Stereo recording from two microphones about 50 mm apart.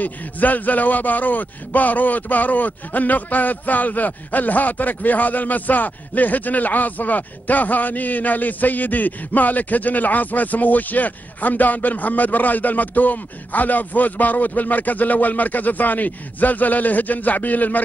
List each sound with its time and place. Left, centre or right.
0.0 s a man's voice: left